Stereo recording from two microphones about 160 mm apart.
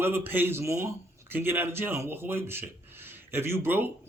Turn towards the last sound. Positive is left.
turn(degrees=-10)  # may be behind; listen again after turning